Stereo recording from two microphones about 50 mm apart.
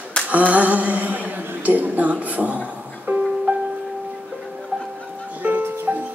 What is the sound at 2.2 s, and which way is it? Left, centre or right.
Music, right.